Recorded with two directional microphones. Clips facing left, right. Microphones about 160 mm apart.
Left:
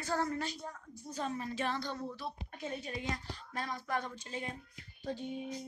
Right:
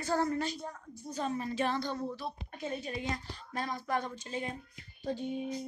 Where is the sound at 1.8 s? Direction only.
40° right (ahead or behind).